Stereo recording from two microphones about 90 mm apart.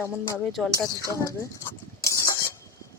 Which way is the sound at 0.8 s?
35° left (ahead or behind).